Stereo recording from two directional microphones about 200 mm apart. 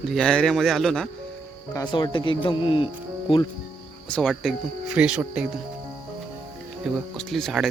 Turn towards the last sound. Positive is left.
turn(degrees=0)  # may be behind; listen again after turning